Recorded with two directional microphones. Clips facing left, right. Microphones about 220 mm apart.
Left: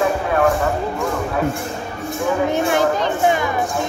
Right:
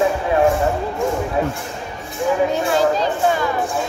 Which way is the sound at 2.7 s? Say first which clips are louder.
Even; 20° left (ahead or behind).